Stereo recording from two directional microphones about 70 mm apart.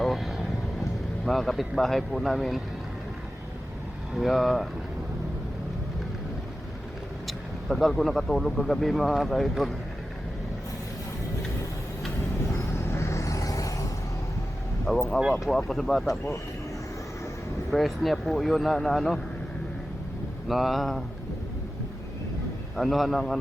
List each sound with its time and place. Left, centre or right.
0.0 s vehicle: centre
1.2 s speech: centre
4.1 s speech: centre
7.3 s speech: centre
12.4 s vehicle: left
14.8 s speech: centre
17.7 s speech: centre
20.5 s speech: centre
22.7 s speech: centre